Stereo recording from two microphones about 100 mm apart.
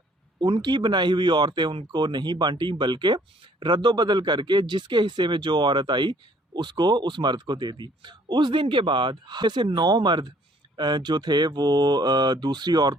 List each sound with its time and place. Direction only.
0.3 s a man's voice: 50° right (ahead or behind)